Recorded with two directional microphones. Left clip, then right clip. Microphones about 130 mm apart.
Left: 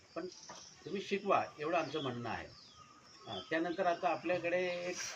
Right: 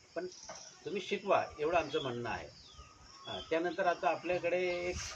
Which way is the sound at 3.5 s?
25° right (ahead or behind).